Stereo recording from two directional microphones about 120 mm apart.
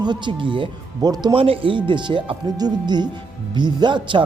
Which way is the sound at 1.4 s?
45° right (ahead or behind).